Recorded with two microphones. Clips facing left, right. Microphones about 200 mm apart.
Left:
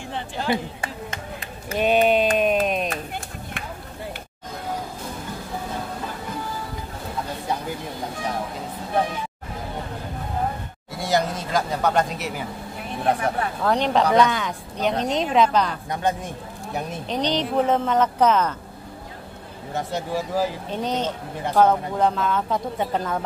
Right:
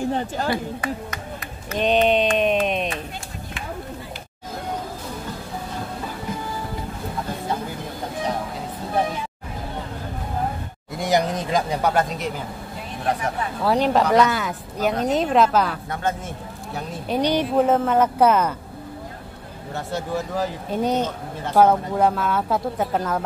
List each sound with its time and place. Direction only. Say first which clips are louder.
0.0 s speech: right 7 dB; 40° right (ahead or behind)
0.5 s speech: right 1 dB; 25° left (ahead or behind)
1.8 s speech: even; 5° left (ahead or behind)
2.3 s a sound: even; 5° left (ahead or behind)
11.0 s speech: right 2 dB; 15° right (ahead or behind); by 12.4 s 5° left (ahead or behind)
13.7 s speech: right 2 dB; 5° right (ahead or behind)
15.9 s a man's voice: left 1 dB; 15° left (ahead or behind)
17.1 s speech: right 3 dB; 10° right (ahead or behind)
19.7 s speech: even; 10° left (ahead or behind)
20.7 s speech: right 3 dB; 10° right (ahead or behind)